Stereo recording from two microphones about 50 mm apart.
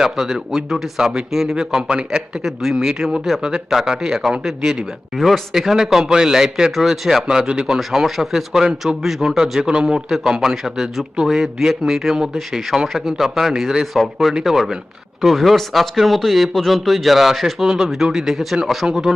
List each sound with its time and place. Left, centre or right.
0.0 s a man's voice: centre
5.1 s a man's voice: centre
5.5 s a man's voice: centre
7.8 s a man's voice: centre